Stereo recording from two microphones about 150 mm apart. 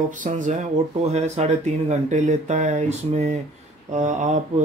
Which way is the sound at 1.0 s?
45° right (ahead or behind).